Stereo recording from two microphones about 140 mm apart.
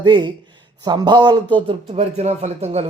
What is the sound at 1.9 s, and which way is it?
Speech, 50° right (ahead or behind).